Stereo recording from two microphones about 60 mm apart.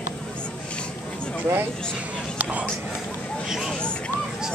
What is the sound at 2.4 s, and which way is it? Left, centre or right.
Whispering, right.